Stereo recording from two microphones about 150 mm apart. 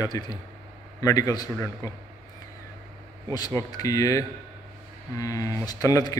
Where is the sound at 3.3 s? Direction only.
25° left (ahead or behind).